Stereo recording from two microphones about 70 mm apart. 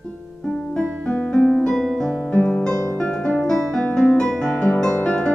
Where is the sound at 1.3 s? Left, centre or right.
Centre.